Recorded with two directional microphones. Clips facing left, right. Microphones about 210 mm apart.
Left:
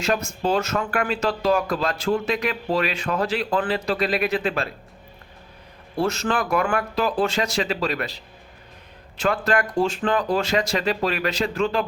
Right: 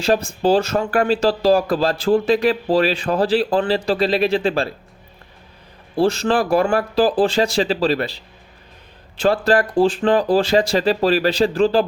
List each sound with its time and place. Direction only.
0.0 s speech: 30° right (ahead or behind)
6.0 s speech: 30° right (ahead or behind)